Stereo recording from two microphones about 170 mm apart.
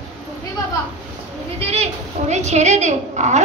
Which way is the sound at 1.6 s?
35° right (ahead or behind).